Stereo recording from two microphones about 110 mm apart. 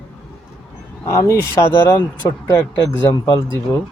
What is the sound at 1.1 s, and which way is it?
Speech, 25° left (ahead or behind).